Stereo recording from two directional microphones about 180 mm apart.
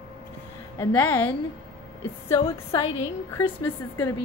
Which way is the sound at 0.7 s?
10° left (ahead or behind).